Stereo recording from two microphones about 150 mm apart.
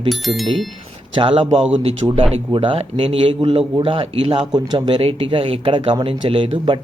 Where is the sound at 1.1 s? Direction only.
35° right (ahead or behind).